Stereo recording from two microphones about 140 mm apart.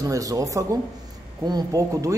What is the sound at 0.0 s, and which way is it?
A man's voice, 25° right (ahead or behind).